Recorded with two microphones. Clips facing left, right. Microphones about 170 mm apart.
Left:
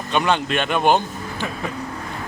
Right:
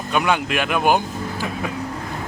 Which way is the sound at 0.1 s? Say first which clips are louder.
Even; 10° right (ahead or behind).